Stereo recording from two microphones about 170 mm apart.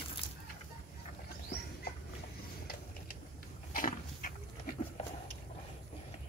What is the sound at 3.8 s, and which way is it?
Pig, 55° left (ahead or behind).